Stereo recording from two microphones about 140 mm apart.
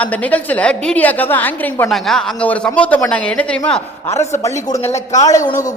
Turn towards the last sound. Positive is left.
turn(degrees=25)  # may be behind; listen again after turning